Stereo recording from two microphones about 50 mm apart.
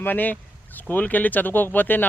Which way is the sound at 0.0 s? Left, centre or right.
Left.